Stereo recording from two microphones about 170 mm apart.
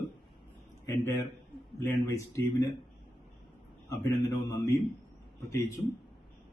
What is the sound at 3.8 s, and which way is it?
Speech, 15° left (ahead or behind).